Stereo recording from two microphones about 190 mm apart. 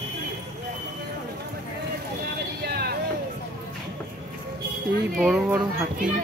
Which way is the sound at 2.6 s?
55° right (ahead or behind).